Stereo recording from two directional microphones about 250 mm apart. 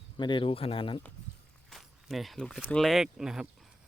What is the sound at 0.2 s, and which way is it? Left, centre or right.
Speech, centre.